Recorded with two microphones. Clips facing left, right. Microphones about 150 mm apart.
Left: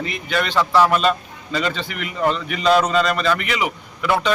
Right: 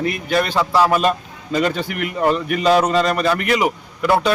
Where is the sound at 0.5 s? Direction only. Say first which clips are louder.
Left 2 dB; 10° right (ahead or behind).